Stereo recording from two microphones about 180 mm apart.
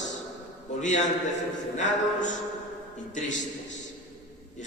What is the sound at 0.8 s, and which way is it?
Speech, 40° left (ahead or behind).